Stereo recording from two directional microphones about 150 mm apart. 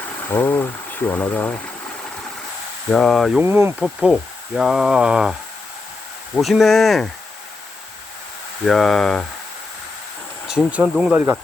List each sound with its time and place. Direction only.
0.3 s speech: 15° left (ahead or behind)
2.9 s speech: 5° left (ahead or behind)
3.4 s speech: 15° right (ahead or behind)
3.8 s speech: centre (ahead or behind)
6.3 s speech: centre (ahead or behind)
8.6 s speech: centre (ahead or behind)
10.4 s speech: 5° right (ahead or behind)